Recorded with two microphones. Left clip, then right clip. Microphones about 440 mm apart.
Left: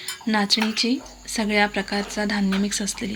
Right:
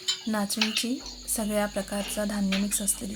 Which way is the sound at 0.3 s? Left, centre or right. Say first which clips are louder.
Left 12 dB; right.